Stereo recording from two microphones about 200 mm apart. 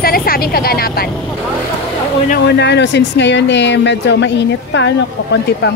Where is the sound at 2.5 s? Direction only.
60° left (ahead or behind).